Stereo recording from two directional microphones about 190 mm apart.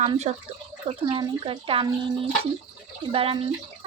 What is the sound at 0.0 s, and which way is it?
Speech, 35° right (ahead or behind).